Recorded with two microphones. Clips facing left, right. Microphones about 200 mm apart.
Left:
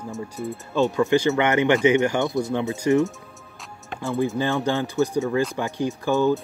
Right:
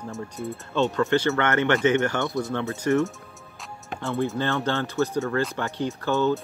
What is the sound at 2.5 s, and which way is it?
Speech, 15° left (ahead or behind).